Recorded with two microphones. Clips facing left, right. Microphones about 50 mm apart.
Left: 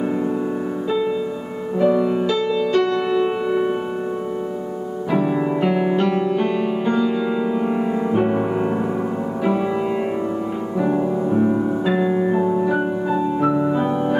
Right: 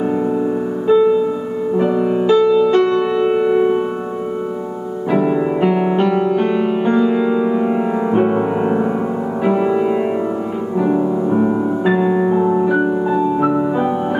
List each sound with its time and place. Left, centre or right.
1.8 s music: centre
3.0 s music: centre
5.1 s music: centre
11.2 s music: centre